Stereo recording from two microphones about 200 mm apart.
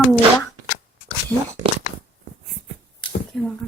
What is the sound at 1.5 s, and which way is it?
Speech, 20° right (ahead or behind).